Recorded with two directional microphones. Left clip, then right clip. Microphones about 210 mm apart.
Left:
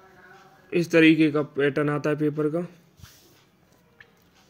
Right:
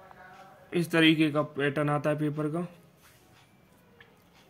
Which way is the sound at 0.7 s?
10° left (ahead or behind).